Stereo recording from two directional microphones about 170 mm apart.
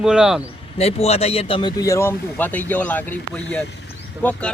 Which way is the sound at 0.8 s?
40° left (ahead or behind).